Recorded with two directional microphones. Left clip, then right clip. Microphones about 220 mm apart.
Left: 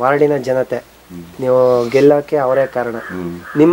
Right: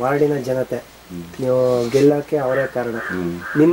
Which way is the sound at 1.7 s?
Centre (ahead or behind).